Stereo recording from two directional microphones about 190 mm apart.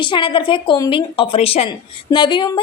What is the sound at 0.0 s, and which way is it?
A woman's voice, 25° left (ahead or behind).